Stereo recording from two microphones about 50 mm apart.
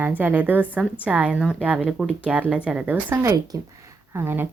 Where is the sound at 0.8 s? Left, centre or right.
Right.